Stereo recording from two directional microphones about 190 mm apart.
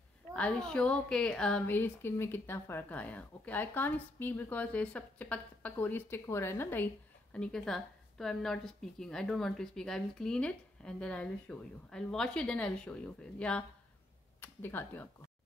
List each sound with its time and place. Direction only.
0.3 s a woman's voice: 5° left (ahead or behind)